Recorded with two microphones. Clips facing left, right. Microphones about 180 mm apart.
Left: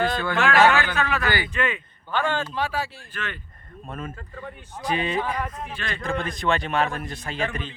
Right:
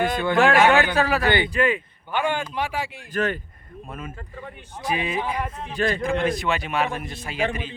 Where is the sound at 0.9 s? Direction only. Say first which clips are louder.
Right 4 dB; 35° right (ahead or behind).